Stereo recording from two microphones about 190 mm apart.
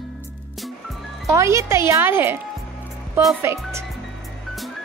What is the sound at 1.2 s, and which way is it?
A woman's voice, 15° right (ahead or behind).